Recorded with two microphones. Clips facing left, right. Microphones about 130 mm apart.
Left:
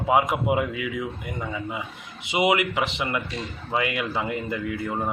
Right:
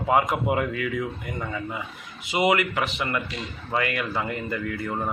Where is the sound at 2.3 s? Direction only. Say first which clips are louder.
Even; 20° left (ahead or behind).